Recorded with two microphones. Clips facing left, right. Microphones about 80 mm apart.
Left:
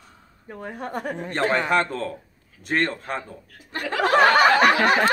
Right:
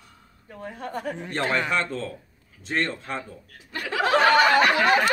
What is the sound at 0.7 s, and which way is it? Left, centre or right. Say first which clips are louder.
Speech: left 2 dB; left.